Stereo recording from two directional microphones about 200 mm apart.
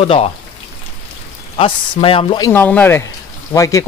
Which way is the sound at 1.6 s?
25° left (ahead or behind).